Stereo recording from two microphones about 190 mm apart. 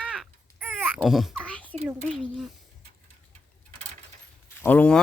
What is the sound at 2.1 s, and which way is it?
Speech, centre (ahead or behind).